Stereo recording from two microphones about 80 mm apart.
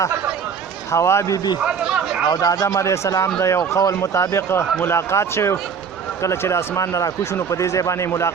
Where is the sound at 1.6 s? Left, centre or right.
Centre.